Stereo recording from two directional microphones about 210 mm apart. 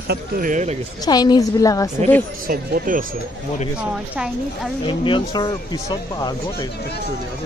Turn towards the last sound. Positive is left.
turn(degrees=20)  # may be behind; listen again after turning